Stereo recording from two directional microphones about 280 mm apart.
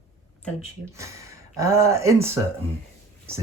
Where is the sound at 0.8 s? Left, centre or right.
Centre.